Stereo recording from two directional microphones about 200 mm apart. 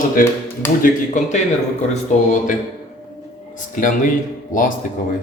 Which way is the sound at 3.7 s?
40° left (ahead or behind).